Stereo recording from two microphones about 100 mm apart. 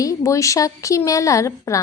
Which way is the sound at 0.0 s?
30° left (ahead or behind).